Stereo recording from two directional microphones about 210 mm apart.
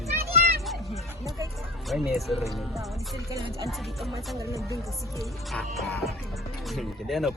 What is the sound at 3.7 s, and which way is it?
Speech, centre (ahead or behind).